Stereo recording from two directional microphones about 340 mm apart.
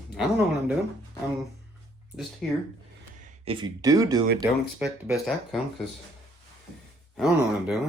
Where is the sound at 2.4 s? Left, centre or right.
Centre.